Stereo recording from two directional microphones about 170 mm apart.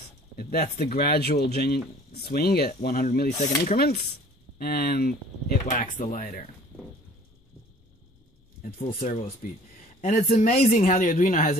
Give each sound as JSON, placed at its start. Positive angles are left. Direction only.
{"t": 0.4, "sound": "speech", "side_deg": 65}
{"t": 3.6, "sound": "speech", "side_deg": 65}
{"t": 6.1, "sound": "speech", "side_deg": 45}
{"t": 9.0, "sound": "speech", "side_deg": 50}